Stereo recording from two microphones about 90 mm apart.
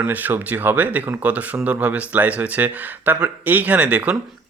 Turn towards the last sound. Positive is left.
turn(degrees=-15)  # may be behind; listen again after turning